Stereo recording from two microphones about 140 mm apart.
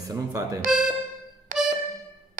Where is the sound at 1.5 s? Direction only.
75° right (ahead or behind).